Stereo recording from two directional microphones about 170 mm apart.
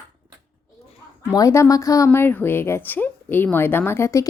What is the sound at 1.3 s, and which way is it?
A woman's voice, 20° left (ahead or behind).